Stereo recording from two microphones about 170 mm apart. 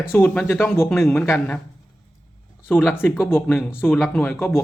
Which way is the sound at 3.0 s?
10° left (ahead or behind).